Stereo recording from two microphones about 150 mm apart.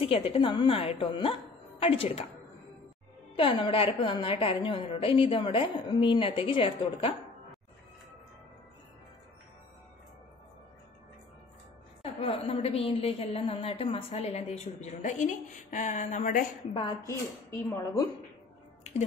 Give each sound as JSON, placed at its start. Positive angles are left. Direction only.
{"t": 0.0, "sound": "a woman's voice", "side_deg": 40}
{"t": 3.3, "sound": "a woman's voice", "side_deg": 35}
{"t": 12.0, "sound": "a woman's voice", "side_deg": 40}
{"t": 16.7, "sound": "a woman's voice", "side_deg": 35}